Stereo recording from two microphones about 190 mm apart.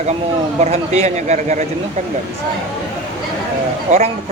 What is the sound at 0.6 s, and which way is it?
Speech, 35° right (ahead or behind).